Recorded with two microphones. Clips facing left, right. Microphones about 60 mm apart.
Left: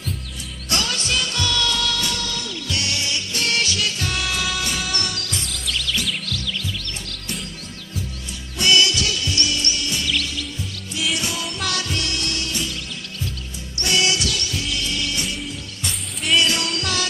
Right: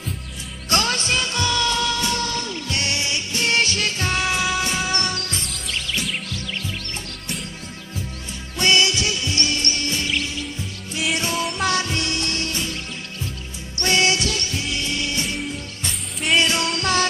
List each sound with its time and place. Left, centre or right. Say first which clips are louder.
0.7 s music: right 3 dB; right
8.5 s music: even; right
13.7 s music: right 2 dB; right
16.3 s music: even; right